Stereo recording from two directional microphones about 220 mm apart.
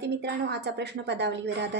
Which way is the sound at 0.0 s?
50° right (ahead or behind).